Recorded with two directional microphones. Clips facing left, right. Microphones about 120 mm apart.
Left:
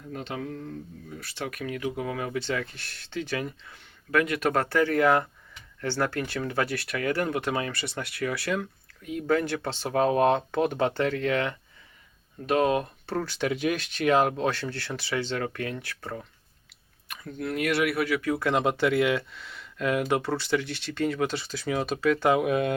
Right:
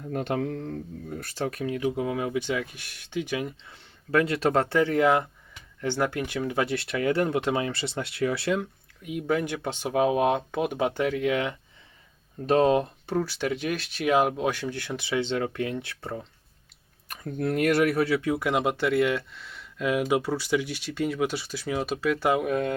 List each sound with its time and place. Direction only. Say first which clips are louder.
0.1 s speech: right 6 dB; 55° right (ahead or behind); by 11.5 s 15° right (ahead or behind)
12.5 s speech: right 3 dB; 30° right (ahead or behind)
13.1 s speech: right 1 dB; 10° right (ahead or behind)
17.1 s speech: right 4 dB; 45° right (ahead or behind); by 22.7 s 5° left (ahead or behind)